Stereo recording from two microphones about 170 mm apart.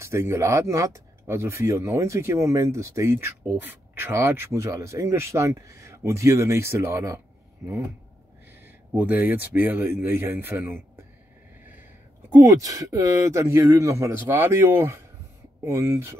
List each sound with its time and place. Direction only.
0.0 s speech: 15° right (ahead or behind)
8.9 s speech: 10° right (ahead or behind)
12.4 s speech: 20° right (ahead or behind)